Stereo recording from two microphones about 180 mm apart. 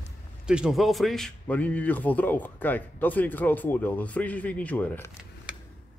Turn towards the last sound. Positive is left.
turn(degrees=10)  # may be behind; listen again after turning